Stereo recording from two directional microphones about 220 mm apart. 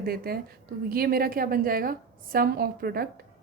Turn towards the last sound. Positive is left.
turn(degrees=-45)  # may be behind; listen again after turning